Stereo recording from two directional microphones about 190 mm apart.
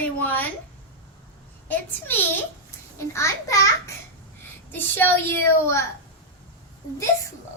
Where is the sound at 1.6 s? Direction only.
10° left (ahead or behind).